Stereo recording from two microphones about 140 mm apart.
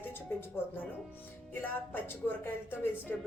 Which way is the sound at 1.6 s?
15° left (ahead or behind).